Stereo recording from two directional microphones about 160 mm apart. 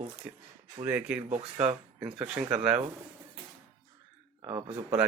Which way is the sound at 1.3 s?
45° right (ahead or behind).